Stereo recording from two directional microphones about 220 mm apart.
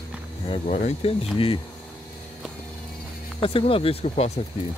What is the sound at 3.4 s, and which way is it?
Speech, 25° left (ahead or behind).